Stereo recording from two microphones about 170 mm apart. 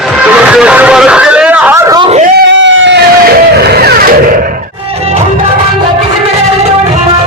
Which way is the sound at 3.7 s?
65° right (ahead or behind).